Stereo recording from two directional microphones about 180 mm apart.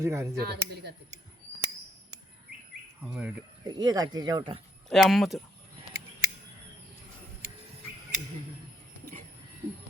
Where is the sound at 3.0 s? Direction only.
10° right (ahead or behind).